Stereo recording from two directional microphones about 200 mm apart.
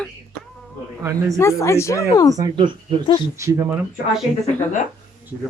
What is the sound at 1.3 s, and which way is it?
Speech, 15° left (ahead or behind).